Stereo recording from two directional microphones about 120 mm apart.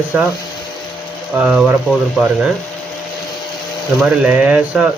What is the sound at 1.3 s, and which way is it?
Speech, 10° right (ahead or behind).